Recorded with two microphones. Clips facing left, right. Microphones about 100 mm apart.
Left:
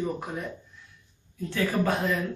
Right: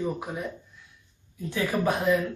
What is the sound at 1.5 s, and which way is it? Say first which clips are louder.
Speech: even; 15° right (ahead or behind).